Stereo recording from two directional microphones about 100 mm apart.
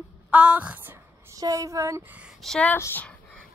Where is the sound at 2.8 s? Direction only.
20° left (ahead or behind).